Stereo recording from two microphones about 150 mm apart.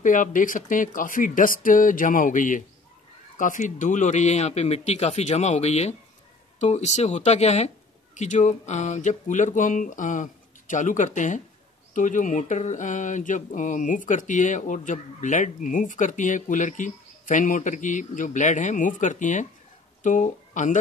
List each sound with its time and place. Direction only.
0.0 s speech: 60° left (ahead or behind)